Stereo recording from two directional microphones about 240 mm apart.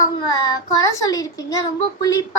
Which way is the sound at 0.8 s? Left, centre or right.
Centre.